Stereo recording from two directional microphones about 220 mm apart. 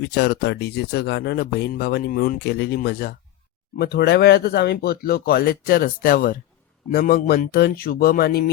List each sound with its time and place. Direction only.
0.0 s speech: 50° left (ahead or behind)